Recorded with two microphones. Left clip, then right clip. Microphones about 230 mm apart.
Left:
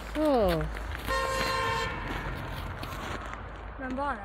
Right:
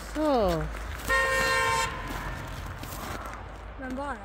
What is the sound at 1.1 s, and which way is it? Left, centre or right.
Toot, right.